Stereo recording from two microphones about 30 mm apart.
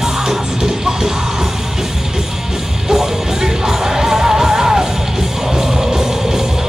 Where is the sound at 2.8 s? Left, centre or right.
Centre.